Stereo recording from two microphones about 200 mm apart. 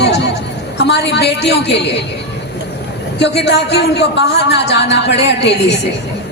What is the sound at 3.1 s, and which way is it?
Speech, 60° left (ahead or behind).